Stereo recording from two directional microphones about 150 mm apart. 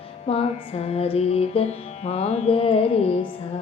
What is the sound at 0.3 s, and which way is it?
Music, 40° left (ahead or behind).